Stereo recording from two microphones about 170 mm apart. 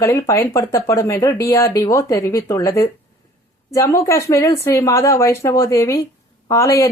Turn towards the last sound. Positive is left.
turn(degrees=15)  # may be behind; listen again after turning